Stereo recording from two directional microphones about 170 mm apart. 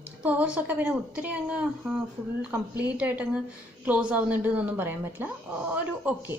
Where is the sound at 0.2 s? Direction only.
10° right (ahead or behind).